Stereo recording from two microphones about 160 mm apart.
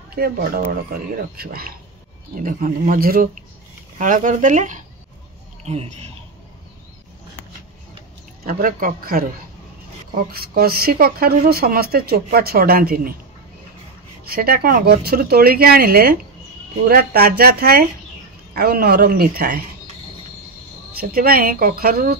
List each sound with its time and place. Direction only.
0.1 s speech: 70° right (ahead or behind); by 5.9 s 40° right (ahead or behind)
8.5 s speech: 65° right (ahead or behind)
14.3 s speech: 70° right (ahead or behind)
21.0 s speech: 65° right (ahead or behind)